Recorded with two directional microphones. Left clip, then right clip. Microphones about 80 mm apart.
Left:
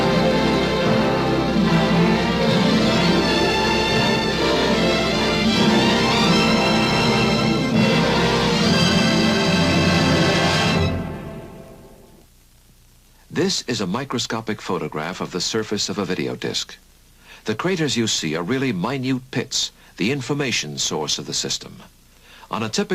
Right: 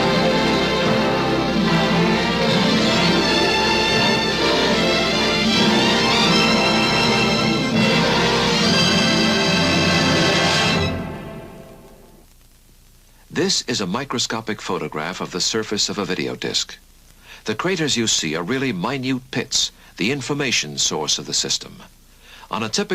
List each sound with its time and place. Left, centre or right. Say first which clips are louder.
0.0 s music: right 1 dB; left
13.3 s speech: right 2 dB; left